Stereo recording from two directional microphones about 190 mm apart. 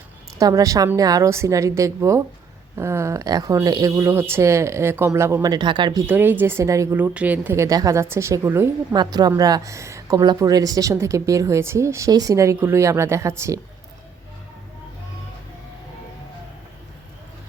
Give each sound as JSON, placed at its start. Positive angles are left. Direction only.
{"t": 0.3, "sound": "speech", "side_deg": -20}